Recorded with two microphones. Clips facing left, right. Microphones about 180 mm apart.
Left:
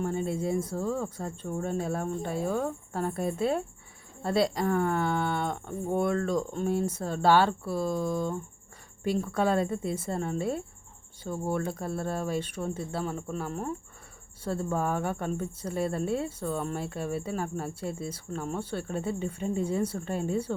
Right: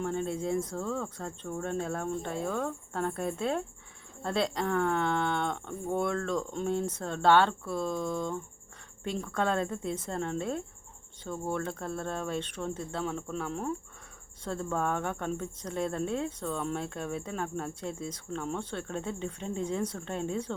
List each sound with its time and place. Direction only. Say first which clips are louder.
0.0 s speech: left 2 dB; 5° left (ahead or behind)